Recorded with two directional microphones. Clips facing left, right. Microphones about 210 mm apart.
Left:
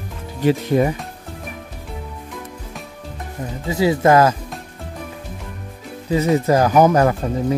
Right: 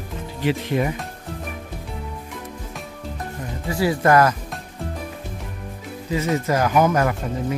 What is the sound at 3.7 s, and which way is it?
Speech, 20° left (ahead or behind).